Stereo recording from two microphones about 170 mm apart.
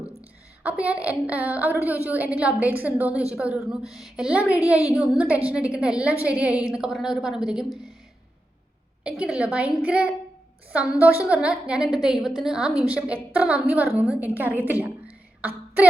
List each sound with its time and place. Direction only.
0.6 s a woman's voice: 10° right (ahead or behind)
9.0 s a woman's voice: 5° right (ahead or behind)
15.4 s a sound: 10° right (ahead or behind)